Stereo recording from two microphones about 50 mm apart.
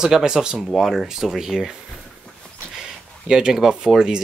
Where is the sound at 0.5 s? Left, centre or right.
Centre.